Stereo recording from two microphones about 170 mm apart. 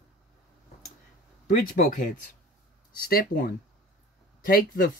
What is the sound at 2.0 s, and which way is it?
Speech, 50° left (ahead or behind).